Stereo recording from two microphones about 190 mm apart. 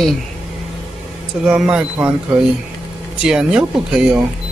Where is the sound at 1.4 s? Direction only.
5° right (ahead or behind).